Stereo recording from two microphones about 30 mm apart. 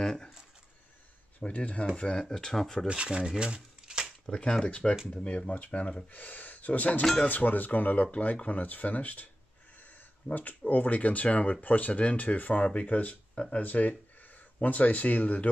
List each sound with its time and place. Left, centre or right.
0.0 s speech: left
1.4 s speech: left
2.0 s speech: left
2.3 s speech: centre
2.9 s speech: right
3.3 s a sound: right
4.3 s speech: left
4.6 s speech: left
6.1 s speech: left
7.2 s speech: left
10.3 s speech: left
10.7 s speech: left
13.3 s speech: left
13.6 s speech: left